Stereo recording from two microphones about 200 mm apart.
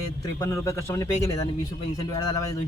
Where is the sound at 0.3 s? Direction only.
15° left (ahead or behind).